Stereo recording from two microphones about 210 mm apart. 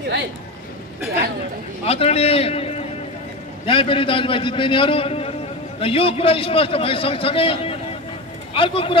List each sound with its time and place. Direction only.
1.9 s a man's voice: 30° left (ahead or behind)